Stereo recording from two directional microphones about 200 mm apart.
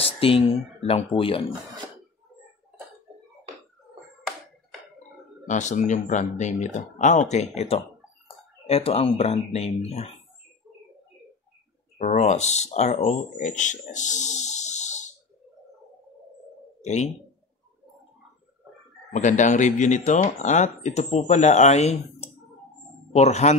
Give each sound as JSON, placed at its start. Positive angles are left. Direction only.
{"t": 0.0, "sound": "speech", "side_deg": 30}
{"t": 5.5, "sound": "speech", "side_deg": 35}
{"t": 12.0, "sound": "speech", "side_deg": 35}
{"t": 19.1, "sound": "speech", "side_deg": 35}